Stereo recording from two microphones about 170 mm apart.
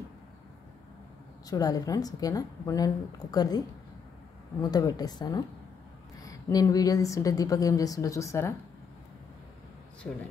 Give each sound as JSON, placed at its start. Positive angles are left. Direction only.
{"t": 1.5, "sound": "a woman's voice", "side_deg": 20}